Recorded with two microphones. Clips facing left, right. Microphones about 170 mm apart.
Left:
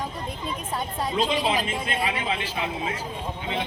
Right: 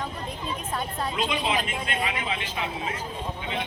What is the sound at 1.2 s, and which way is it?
Speech, 35° left (ahead or behind).